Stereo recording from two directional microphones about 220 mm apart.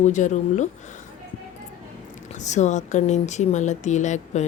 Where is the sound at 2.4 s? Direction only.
30° left (ahead or behind).